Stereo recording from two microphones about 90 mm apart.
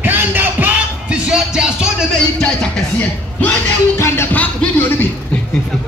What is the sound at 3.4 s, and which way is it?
Music, 25° left (ahead or behind).